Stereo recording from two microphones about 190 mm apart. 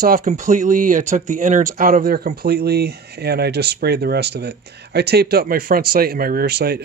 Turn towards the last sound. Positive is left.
turn(degrees=-55)  # may be behind; listen again after turning